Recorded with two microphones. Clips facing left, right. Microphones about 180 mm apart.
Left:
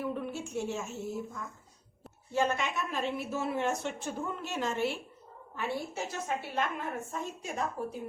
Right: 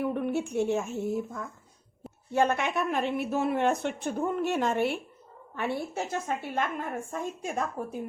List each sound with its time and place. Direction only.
0.0 s a woman's voice: 60° right (ahead or behind)